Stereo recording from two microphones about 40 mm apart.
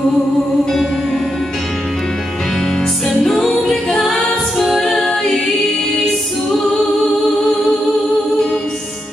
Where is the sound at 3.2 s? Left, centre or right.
Centre.